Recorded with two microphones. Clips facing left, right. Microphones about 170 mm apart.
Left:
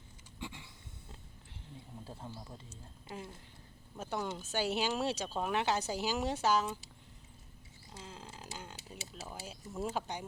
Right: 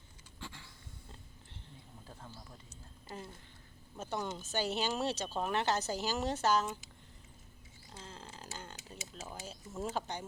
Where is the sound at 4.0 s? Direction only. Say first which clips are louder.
Left 1 dB; 5° left (ahead or behind).